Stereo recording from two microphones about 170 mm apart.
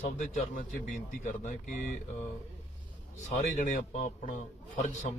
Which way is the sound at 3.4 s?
45° left (ahead or behind).